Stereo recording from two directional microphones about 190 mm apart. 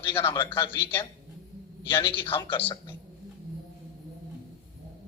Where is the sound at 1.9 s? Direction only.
25° left (ahead or behind).